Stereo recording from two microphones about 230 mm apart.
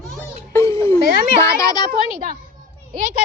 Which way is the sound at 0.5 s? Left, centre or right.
Centre.